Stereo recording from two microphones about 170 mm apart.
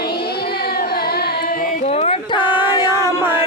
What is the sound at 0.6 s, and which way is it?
Carnatic music, 65° left (ahead or behind).